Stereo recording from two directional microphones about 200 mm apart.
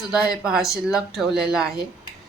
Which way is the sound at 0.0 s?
5° right (ahead or behind).